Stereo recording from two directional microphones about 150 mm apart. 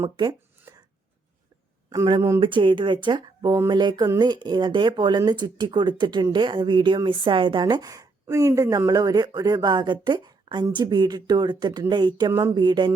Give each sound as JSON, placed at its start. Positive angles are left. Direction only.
{"t": 0.7, "sound": "chopping", "side_deg": -20}
{"t": 1.9, "sound": "speech", "side_deg": -30}